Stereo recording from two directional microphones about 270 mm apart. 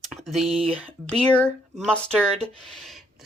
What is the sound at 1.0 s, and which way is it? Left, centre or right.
A woman's voice, centre.